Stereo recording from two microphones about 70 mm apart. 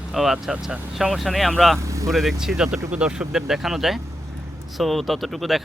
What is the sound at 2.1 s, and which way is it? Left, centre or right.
Speech, centre.